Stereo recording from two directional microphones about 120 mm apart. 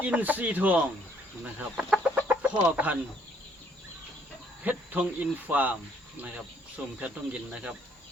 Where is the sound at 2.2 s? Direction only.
15° right (ahead or behind).